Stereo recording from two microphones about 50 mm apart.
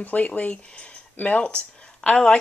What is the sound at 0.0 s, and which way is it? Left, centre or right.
Speech, left.